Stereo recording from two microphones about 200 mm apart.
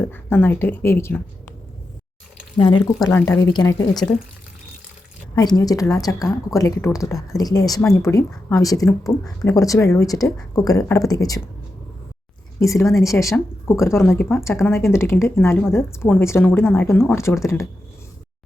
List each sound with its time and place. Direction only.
0.0 s speech: 10° left (ahead or behind)
2.6 s a woman's voice: 25° left (ahead or behind)
2.8 s a woman's voice: 10° left (ahead or behind)
5.3 s speech: 20° left (ahead or behind)
12.5 s speech: 15° left (ahead or behind)